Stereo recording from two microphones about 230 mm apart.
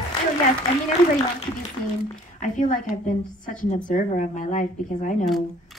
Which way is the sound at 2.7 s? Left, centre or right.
Left.